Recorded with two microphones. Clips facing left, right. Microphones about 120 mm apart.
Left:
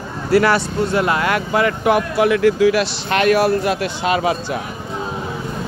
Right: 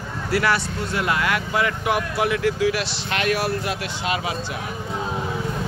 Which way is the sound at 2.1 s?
75° left (ahead or behind).